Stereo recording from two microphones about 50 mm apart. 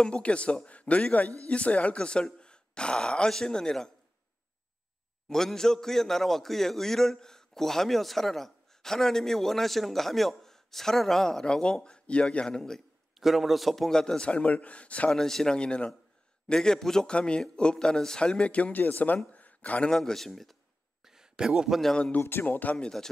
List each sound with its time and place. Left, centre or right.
0.0 s speech: left
5.3 s a man's voice: centre
13.2 s a man's voice: centre; by 15.1 s left
15.1 s a man's voice: centre; by 19.1 s left
19.3 s a sound: left
19.9 s speech: centre
21.0 s a sound: centre
22.2 s speech: left
22.8 s a man's voice: centre